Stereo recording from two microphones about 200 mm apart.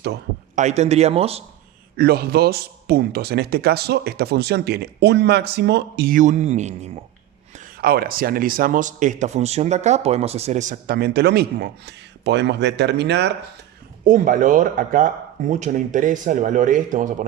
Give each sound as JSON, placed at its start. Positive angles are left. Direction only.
{"t": 0.5, "sound": "speech", "side_deg": -35}
{"t": 2.0, "sound": "a man's voice", "side_deg": -50}
{"t": 14.0, "sound": "speech", "side_deg": -40}